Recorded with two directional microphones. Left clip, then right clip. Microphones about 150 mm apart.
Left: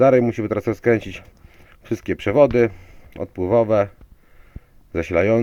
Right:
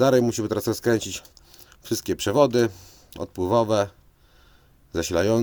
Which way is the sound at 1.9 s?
30° left (ahead or behind).